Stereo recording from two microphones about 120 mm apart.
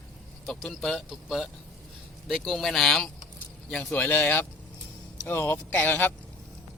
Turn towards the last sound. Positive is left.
turn(degrees=15)  # may be behind; listen again after turning